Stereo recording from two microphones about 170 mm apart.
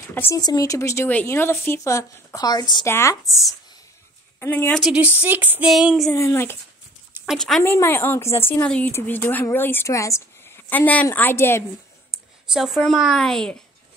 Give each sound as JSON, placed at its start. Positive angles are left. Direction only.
{"t": 0.1, "sound": "speech", "side_deg": 15}
{"t": 4.4, "sound": "speech", "side_deg": 15}
{"t": 4.8, "sound": "female singing", "side_deg": -5}
{"t": 6.1, "sound": "speech", "side_deg": 15}
{"t": 7.2, "sound": "a woman's voice", "side_deg": 0}
{"t": 7.6, "sound": "speech", "side_deg": 15}
{"t": 12.5, "sound": "a woman's voice", "side_deg": 0}